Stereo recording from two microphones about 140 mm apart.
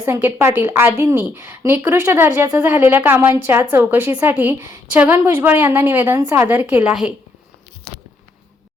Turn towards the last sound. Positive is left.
turn(degrees=-10)  # may be behind; listen again after turning